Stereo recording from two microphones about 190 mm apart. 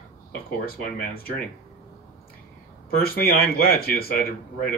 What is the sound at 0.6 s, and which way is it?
Speech, 55° left (ahead or behind).